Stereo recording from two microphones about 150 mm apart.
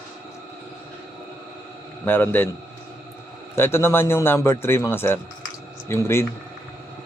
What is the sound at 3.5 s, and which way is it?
A man's voice, 15° left (ahead or behind).